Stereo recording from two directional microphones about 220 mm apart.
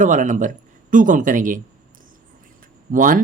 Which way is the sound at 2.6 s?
35° right (ahead or behind).